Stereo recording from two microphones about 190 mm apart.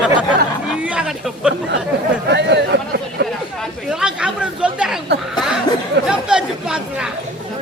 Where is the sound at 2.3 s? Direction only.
65° right (ahead or behind).